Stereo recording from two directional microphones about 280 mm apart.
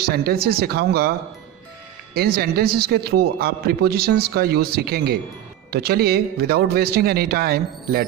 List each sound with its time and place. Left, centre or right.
0.0 s a man's voice: right
2.1 s a man's voice: right